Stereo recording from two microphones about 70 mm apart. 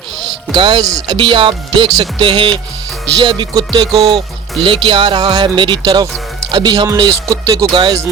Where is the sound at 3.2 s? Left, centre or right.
Right.